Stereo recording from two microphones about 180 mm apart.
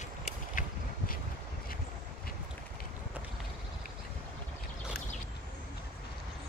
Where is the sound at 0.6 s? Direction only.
45° left (ahead or behind).